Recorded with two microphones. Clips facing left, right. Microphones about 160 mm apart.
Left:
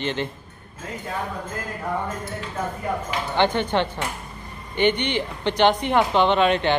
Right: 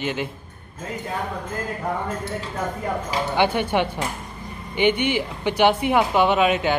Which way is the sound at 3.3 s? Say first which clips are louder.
Even; 10° right (ahead or behind).